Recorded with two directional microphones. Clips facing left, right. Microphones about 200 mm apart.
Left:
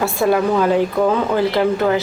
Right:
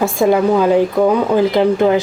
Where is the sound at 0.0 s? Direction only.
15° right (ahead or behind).